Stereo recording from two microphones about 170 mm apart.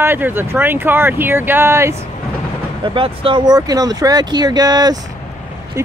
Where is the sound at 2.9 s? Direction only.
30° right (ahead or behind).